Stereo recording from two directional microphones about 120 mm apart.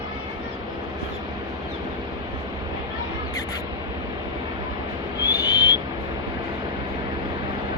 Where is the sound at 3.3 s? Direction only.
30° left (ahead or behind).